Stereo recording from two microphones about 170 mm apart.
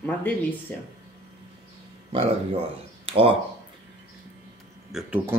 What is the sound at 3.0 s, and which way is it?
Speech, 35° right (ahead or behind).